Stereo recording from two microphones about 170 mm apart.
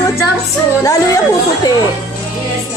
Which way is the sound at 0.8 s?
20° left (ahead or behind).